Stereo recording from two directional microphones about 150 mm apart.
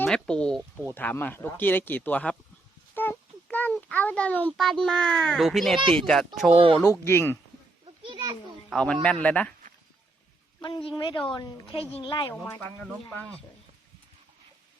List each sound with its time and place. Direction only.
0.0 s speech: 5° left (ahead or behind)
2.9 s a sound: 15° left (ahead or behind)
4.5 s a child's voice: 5° left (ahead or behind)
6.5 s speech: 35° right (ahead or behind)
7.0 s speech: 15° left (ahead or behind)
8.0 s children playing: 30° right (ahead or behind)
8.7 s speech: 5° left (ahead or behind)
10.6 s a woman's voice: 30° left (ahead or behind)